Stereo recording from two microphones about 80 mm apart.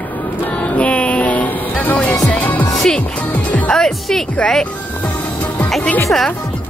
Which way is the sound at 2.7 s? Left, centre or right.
Centre.